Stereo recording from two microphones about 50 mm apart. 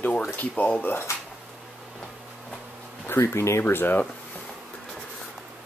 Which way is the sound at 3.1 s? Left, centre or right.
Left.